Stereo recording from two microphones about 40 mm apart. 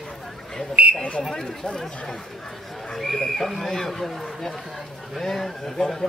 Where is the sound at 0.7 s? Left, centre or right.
Right.